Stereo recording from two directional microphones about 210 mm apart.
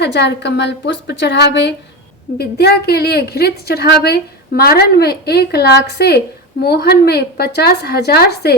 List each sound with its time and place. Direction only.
0.0 s a woman's voice: 55° left (ahead or behind)